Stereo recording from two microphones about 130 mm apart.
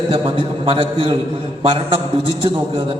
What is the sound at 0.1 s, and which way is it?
A man's voice, 45° right (ahead or behind).